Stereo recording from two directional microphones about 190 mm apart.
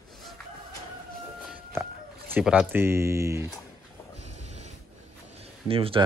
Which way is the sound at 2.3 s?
5° right (ahead or behind).